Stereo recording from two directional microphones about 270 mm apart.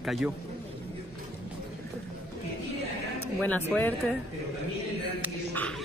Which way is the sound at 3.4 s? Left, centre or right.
Centre.